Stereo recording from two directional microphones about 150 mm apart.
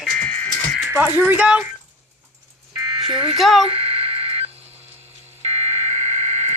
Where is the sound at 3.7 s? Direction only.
40° right (ahead or behind).